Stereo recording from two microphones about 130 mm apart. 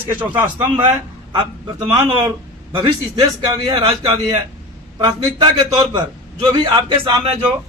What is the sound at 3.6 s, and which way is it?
Speech, 35° right (ahead or behind).